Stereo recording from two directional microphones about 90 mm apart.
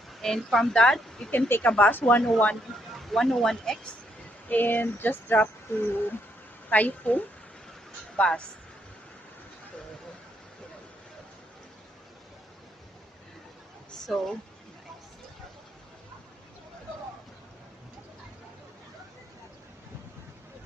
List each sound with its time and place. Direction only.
0.1 s speech: centre (ahead or behind)
1.3 s speech: 25° left (ahead or behind)
2.2 s a woman's voice: 10° left (ahead or behind)
4.4 s a woman's voice: 20° left (ahead or behind)